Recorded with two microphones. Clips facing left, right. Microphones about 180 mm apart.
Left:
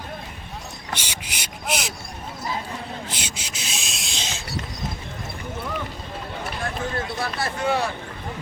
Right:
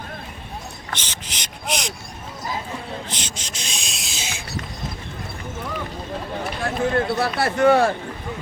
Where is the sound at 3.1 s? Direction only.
10° left (ahead or behind).